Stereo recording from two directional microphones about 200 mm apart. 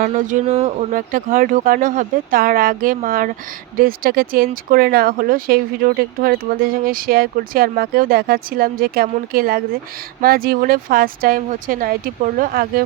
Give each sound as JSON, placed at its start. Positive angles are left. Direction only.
{"t": 0.0, "sound": "speech", "side_deg": -40}
{"t": 0.9, "sound": "speech", "side_deg": -45}